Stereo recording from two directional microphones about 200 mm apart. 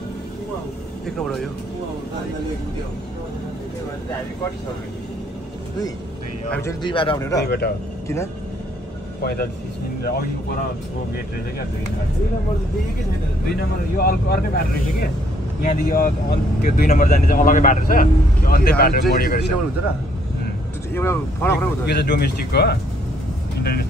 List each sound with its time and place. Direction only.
1.0 s speech: centre (ahead or behind)
6.8 s a man's voice: 25° left (ahead or behind)
7.4 s speech: 55° left (ahead or behind)
9.2 s speech: 50° left (ahead or behind)
13.5 s speech: 50° left (ahead or behind)
20.9 s speech: 10° left (ahead or behind)
21.8 s a man's voice: 55° left (ahead or behind)